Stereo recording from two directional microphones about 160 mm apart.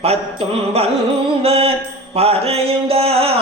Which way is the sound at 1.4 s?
40° right (ahead or behind).